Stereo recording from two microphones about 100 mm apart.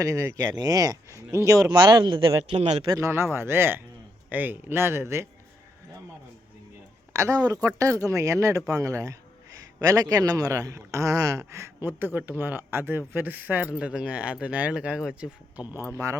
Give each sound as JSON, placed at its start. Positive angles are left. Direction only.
{"t": 0.0, "sound": "speech", "side_deg": -35}
{"t": 1.8, "sound": "speech", "side_deg": -45}
{"t": 2.9, "sound": "a man's voice", "side_deg": -25}
{"t": 7.1, "sound": "speech", "side_deg": -30}